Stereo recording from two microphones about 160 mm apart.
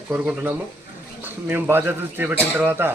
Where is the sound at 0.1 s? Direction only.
10° right (ahead or behind).